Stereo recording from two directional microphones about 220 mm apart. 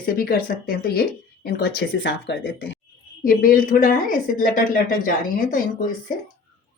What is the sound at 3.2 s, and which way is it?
A woman's voice, 40° left (ahead or behind).